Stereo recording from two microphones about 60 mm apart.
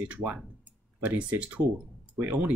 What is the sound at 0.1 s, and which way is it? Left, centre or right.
Speech, right.